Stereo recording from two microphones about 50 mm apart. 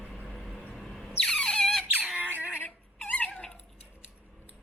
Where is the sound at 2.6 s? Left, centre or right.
Left.